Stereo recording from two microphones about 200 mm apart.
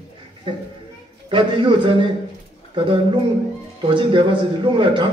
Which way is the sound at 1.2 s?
25° right (ahead or behind).